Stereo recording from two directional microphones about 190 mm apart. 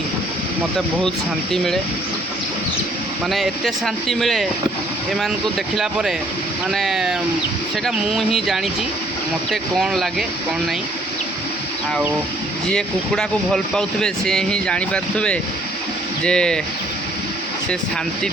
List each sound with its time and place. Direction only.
1.5 s speech: centre (ahead or behind)
3.2 s speech: centre (ahead or behind)
5.7 s speech: centre (ahead or behind)
12.7 s speech: 5° left (ahead or behind)